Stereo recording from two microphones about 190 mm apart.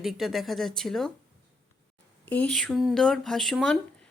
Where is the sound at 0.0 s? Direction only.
Centre (ahead or behind).